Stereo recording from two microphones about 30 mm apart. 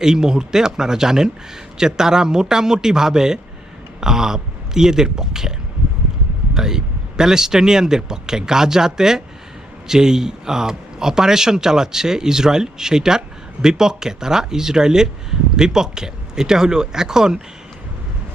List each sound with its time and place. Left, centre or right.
0.0 s speech: right